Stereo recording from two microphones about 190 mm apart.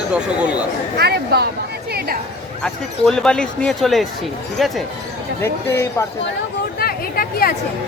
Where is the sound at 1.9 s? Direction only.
50° right (ahead or behind).